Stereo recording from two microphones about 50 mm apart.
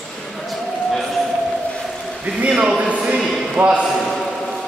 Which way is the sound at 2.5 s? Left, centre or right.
Centre.